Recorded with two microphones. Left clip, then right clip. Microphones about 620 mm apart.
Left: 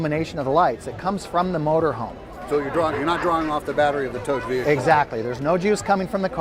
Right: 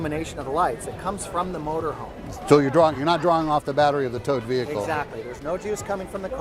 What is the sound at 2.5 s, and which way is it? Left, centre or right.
Speech, right.